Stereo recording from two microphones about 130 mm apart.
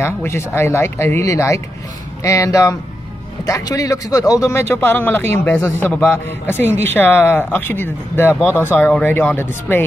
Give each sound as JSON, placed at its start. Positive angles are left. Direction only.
{"t": 0.0, "sound": "speech", "side_deg": 20}